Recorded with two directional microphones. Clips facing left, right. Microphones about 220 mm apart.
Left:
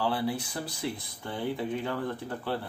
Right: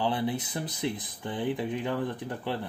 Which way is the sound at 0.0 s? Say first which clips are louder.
Right 1 dB; 20° right (ahead or behind).